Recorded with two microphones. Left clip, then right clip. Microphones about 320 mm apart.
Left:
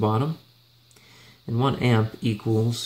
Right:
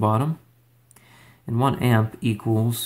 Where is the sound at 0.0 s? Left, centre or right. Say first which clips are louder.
Right 2 dB; centre.